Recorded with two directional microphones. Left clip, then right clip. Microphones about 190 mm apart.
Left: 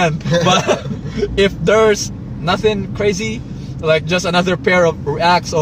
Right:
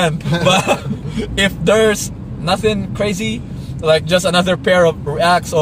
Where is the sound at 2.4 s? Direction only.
15° right (ahead or behind).